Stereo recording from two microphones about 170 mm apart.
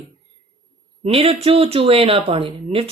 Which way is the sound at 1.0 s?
35° right (ahead or behind).